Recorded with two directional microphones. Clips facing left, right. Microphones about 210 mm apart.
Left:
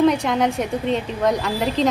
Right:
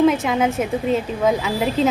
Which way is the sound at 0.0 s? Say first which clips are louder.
Right 1 dB; 5° right (ahead or behind).